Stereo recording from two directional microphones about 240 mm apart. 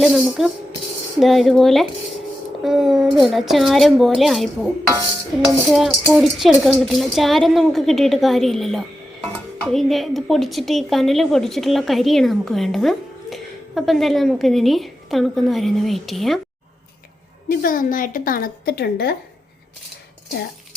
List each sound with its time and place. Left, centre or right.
0.0 s a woman's voice: centre
17.5 s a woman's voice: left